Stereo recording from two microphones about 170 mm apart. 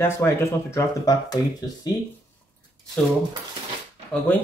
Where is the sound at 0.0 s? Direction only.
15° left (ahead or behind).